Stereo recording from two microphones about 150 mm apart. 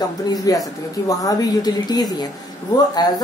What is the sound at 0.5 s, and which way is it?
A woman's voice, 25° left (ahead or behind).